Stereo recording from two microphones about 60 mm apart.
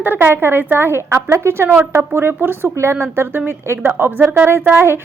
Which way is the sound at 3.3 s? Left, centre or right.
Right.